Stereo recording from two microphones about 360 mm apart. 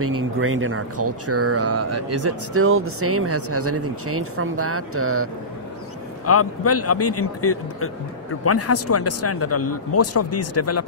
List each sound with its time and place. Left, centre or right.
0.0 s speech: right
6.2 s speech: left